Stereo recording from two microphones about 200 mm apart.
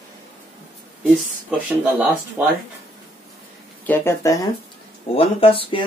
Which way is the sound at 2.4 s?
10° right (ahead or behind).